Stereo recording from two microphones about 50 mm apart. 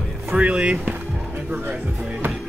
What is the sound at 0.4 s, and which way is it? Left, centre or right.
Speech, right.